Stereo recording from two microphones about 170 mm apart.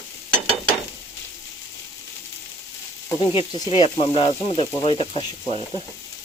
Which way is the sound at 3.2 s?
30° left (ahead or behind).